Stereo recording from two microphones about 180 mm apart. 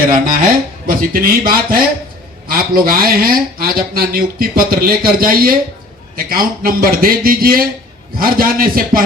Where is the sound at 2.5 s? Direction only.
55° right (ahead or behind).